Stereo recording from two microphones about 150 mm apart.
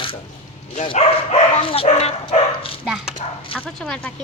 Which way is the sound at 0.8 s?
40° left (ahead or behind).